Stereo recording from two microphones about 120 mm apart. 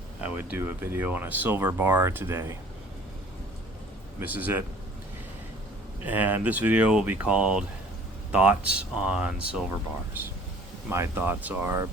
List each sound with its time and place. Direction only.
0.2 s speech: 15° right (ahead or behind)
4.2 s speech: 15° right (ahead or behind)
6.0 s speech: 15° right (ahead or behind)
10.8 s speech: 20° right (ahead or behind)